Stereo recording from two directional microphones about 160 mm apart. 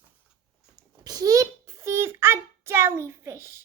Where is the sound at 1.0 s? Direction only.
25° right (ahead or behind).